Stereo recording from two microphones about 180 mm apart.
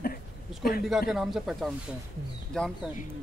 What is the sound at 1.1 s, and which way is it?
A man's voice, centre (ahead or behind).